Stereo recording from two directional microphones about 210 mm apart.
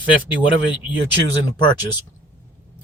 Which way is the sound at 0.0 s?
25° left (ahead or behind).